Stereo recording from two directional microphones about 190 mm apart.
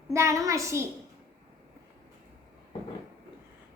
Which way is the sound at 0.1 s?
15° right (ahead or behind).